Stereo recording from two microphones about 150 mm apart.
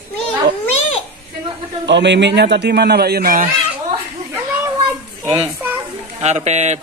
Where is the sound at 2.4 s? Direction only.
90° right; by 3.5 s 75° right (ahead or behind).